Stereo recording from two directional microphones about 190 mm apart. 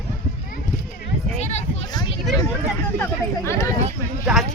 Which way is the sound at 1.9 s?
20° left (ahead or behind).